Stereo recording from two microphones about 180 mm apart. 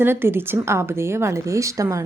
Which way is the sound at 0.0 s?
10° right (ahead or behind).